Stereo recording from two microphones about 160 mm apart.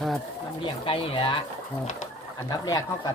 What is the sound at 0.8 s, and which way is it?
Speech, 35° left (ahead or behind).